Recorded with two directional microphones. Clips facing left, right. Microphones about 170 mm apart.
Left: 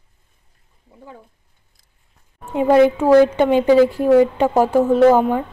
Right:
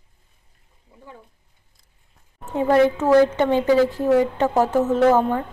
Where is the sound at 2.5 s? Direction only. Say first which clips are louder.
Left 4 dB; 15° left (ahead or behind).